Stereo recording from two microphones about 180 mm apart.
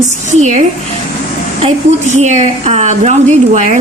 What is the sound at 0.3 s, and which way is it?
Speech, 40° right (ahead or behind).